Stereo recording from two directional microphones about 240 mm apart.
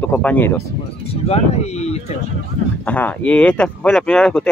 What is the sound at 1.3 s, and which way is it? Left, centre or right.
Speech, left.